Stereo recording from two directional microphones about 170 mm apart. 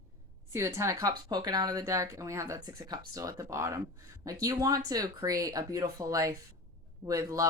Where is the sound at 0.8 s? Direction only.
20° right (ahead or behind).